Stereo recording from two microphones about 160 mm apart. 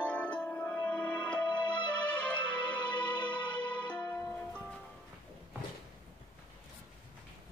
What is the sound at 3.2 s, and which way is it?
Music, 30° left (ahead or behind).